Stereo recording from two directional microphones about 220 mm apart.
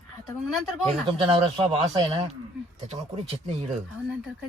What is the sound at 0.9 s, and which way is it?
Speech, 25° right (ahead or behind).